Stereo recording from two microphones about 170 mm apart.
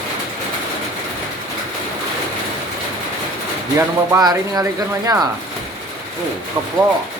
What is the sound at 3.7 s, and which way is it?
Speech, 20° right (ahead or behind).